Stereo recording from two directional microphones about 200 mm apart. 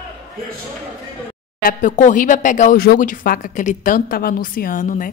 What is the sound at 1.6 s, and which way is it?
Speech, 45° left (ahead or behind).